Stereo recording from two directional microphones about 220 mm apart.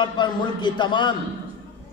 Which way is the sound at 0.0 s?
20° left (ahead or behind).